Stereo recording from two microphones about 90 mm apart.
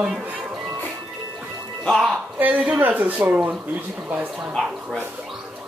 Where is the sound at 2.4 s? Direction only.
15° right (ahead or behind).